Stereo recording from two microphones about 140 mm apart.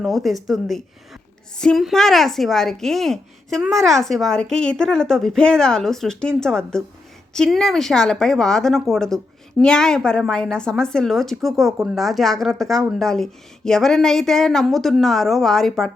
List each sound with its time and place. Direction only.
0.0 s a woman's voice: centre (ahead or behind)